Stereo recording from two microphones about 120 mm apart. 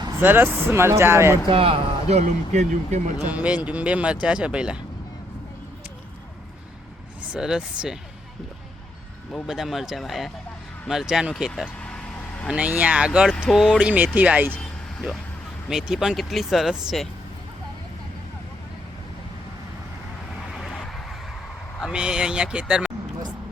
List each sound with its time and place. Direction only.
0.2 s speech: 20° right (ahead or behind)
1.5 s speech: 50° right (ahead or behind); by 3.0 s 75° right (ahead or behind)
3.2 s speech: 10° right (ahead or behind)
7.2 s speech: 5° right (ahead or behind)
9.5 s speech: centre (ahead or behind)
11.8 s vehicle: 10° left (ahead or behind)
12.5 s speech: 10° right (ahead or behind)
14.5 s vehicle: 5° left (ahead or behind)
15.7 s speech: 5° right (ahead or behind)
20.5 s vehicle: 5° left (ahead or behind)
21.9 s speech: 5° right (ahead or behind)